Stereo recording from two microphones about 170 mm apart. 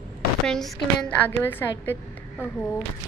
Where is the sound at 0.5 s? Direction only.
5° left (ahead or behind).